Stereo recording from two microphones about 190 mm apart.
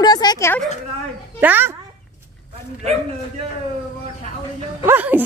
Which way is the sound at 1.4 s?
10° right (ahead or behind).